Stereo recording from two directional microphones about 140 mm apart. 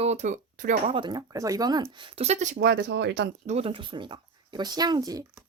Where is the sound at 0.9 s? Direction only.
35° right (ahead or behind); by 2.6 s 55° right (ahead or behind).